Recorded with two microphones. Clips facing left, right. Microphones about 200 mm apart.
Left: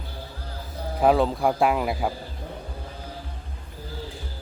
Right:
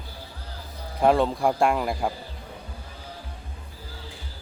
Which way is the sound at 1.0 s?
Centre (ahead or behind).